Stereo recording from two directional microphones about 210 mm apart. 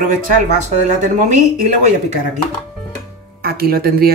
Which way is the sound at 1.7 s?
35° right (ahead or behind).